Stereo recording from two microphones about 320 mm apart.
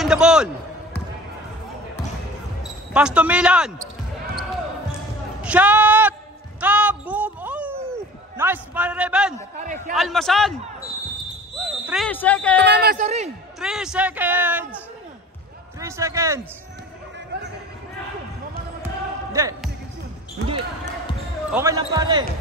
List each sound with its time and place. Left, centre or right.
0.0 s a man's voice: centre
2.9 s a man's voice: centre
5.4 s a sound: centre
9.6 s speech: right
9.9 s a man's voice: centre
11.8 s a man's voice: centre
12.6 s speech: right
13.6 s a man's voice: centre
15.8 s speech: centre
19.3 s speech: centre
21.5 s speech: centre